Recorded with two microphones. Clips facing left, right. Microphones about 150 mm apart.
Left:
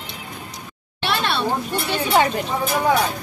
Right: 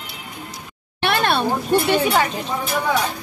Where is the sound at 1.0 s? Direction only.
50° right (ahead or behind).